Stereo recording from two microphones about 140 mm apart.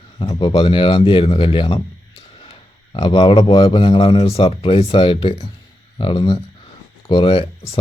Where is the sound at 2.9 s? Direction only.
40° left (ahead or behind).